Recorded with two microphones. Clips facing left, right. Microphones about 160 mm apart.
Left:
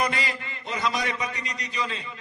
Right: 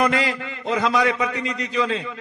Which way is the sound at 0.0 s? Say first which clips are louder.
Right 7 dB; 90° right.